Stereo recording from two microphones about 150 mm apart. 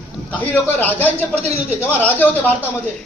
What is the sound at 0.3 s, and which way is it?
A man's voice, 10° left (ahead or behind).